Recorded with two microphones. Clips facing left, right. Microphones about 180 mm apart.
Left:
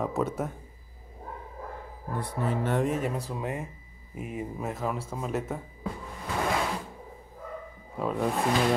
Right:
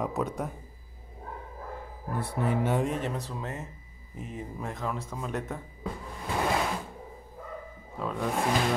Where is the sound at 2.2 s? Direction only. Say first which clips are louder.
Right 1 dB; 10° right (ahead or behind).